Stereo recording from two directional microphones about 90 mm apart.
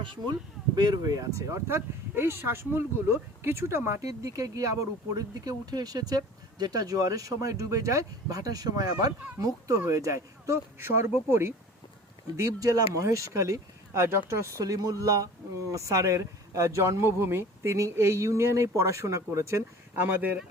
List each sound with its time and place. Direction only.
0.0 s speech: 65° right (ahead or behind)
0.8 s speech: 45° right (ahead or behind); by 11.5 s 30° right (ahead or behind)
12.4 s speech: 40° right (ahead or behind)
20.0 s speech: 20° right (ahead or behind)